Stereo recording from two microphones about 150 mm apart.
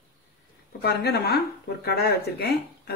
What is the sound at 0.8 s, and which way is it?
Speech, 90° left.